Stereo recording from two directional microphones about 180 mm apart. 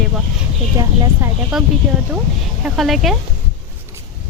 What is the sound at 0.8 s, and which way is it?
Speech, 20° right (ahead or behind).